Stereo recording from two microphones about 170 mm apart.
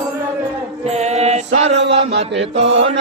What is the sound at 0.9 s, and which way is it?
Mantra, 40° right (ahead or behind).